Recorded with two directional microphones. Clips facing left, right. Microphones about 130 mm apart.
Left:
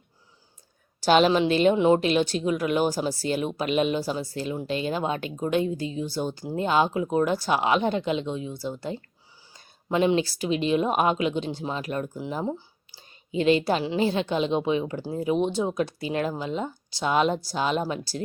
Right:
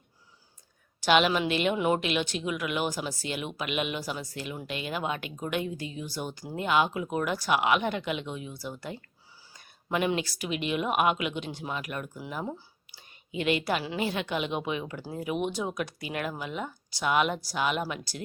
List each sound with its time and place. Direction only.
1.0 s a woman's voice: 35° left (ahead or behind)